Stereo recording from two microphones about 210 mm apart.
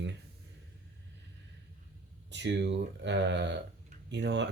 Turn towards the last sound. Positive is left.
turn(degrees=-55)  # may be behind; listen again after turning